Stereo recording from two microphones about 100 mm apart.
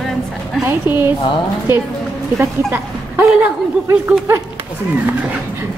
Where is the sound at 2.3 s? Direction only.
25° right (ahead or behind).